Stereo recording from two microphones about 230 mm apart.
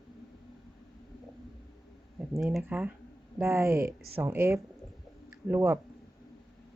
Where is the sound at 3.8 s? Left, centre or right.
Right.